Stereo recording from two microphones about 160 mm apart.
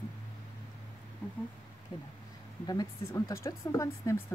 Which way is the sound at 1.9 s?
25° left (ahead or behind).